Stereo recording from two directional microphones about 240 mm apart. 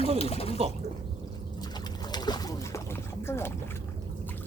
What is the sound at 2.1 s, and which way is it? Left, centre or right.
Boat, centre.